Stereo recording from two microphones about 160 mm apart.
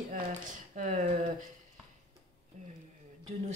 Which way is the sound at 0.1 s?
55° right (ahead or behind).